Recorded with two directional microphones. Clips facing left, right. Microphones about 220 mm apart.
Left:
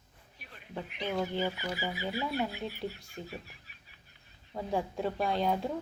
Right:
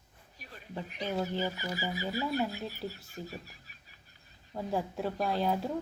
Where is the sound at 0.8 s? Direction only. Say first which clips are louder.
Even; 40° right (ahead or behind).